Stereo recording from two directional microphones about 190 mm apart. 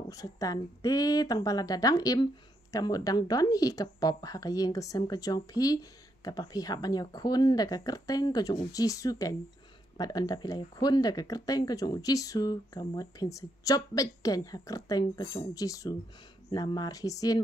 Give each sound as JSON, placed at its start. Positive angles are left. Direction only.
{"t": 0.1, "sound": "a woman's voice", "side_deg": 20}